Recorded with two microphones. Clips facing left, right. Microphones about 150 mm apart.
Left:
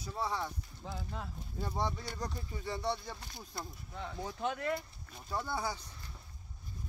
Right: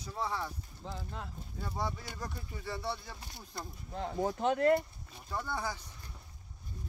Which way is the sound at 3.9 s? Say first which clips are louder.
Right 8 dB; 45° right (ahead or behind).